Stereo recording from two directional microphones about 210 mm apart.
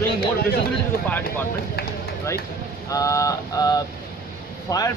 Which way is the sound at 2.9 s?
15° left (ahead or behind).